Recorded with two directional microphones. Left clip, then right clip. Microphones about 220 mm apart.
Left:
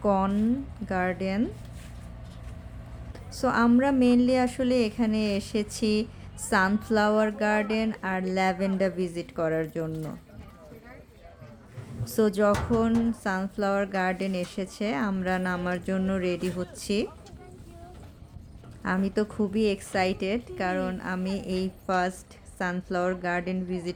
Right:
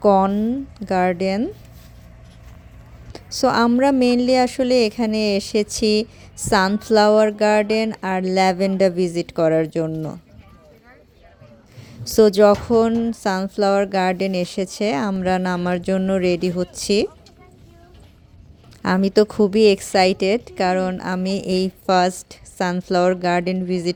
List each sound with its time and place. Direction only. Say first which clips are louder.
0.0 s a woman's voice: right 10 dB; 30° right (ahead or behind)
3.1 s a woman's voice: right 9 dB; 30° right (ahead or behind)
12.0 s a woman's voice: right 11 dB; 30° right (ahead or behind)
18.8 s a woman's voice: right 11 dB; 35° right (ahead or behind)